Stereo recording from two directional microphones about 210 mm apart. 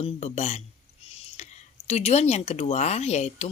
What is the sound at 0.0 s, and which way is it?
Speech, 30° left (ahead or behind).